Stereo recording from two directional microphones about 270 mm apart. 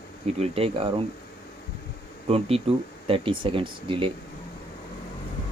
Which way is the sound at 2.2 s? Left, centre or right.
Right.